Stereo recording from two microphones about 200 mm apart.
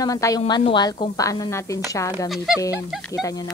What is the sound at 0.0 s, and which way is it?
Speech, 15° left (ahead or behind).